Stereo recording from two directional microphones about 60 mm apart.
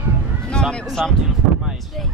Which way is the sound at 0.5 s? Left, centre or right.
Centre.